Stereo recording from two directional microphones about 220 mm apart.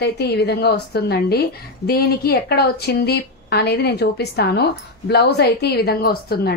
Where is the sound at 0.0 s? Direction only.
50° left (ahead or behind).